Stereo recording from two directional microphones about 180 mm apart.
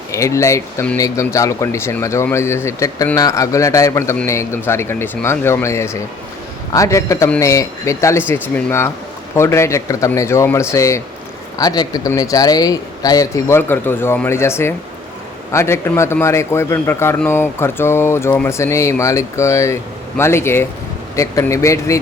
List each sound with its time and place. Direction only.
0.1 s speech: 15° left (ahead or behind)